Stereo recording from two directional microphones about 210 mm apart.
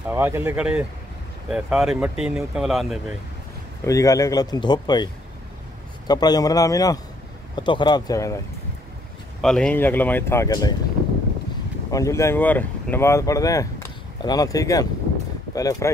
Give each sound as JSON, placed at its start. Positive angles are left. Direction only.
{"t": 0.1, "sound": "speech", "side_deg": -10}
{"t": 3.8, "sound": "speech", "side_deg": 15}
{"t": 9.4, "sound": "speech", "side_deg": 5}
{"t": 11.9, "sound": "speech", "side_deg": 15}